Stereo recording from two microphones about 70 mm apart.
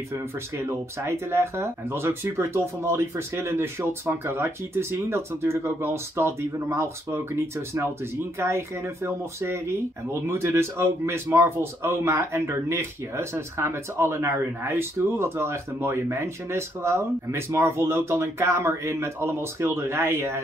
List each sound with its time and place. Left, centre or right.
0.1 s speech: right